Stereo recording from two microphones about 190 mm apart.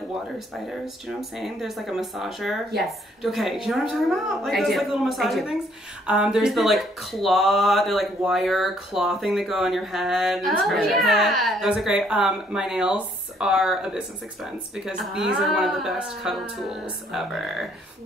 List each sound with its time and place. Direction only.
0.7 s speech: centre (ahead or behind)